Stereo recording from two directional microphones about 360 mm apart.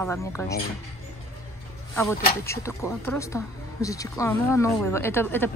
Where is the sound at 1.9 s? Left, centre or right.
Centre.